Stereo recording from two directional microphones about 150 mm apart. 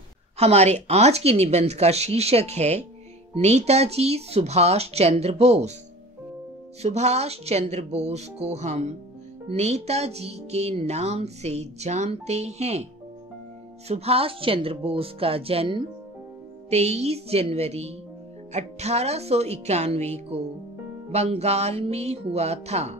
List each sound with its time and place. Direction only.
0.4 s speech: 45° right (ahead or behind)
6.8 s speech: 45° right (ahead or behind)
13.8 s speech: 45° right (ahead or behind)